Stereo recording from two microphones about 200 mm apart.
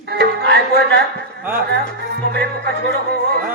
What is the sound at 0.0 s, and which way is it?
Music, 55° right (ahead or behind).